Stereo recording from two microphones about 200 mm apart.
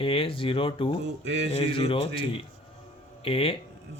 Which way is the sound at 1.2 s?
60° right (ahead or behind).